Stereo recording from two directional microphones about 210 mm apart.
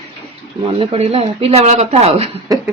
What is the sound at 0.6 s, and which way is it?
Speech, 25° right (ahead or behind).